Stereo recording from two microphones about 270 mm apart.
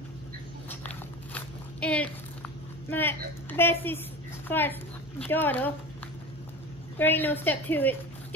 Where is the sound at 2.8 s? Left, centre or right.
Centre.